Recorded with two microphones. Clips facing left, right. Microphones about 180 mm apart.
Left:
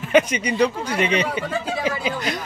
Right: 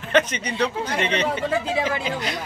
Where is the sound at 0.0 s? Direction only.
10° left (ahead or behind).